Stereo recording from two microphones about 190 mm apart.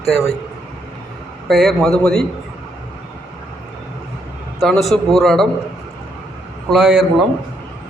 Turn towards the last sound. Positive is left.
turn(degrees=-5)  # may be behind; listen again after turning